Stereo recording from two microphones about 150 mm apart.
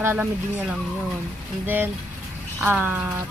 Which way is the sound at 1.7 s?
15° right (ahead or behind).